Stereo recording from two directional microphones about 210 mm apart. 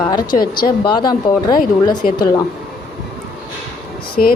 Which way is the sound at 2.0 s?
40° left (ahead or behind).